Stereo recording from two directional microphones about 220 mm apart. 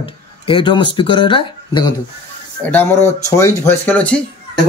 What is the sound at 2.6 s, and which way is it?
Speech, 10° left (ahead or behind).